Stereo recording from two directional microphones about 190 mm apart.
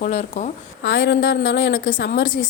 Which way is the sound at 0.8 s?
75° left (ahead or behind).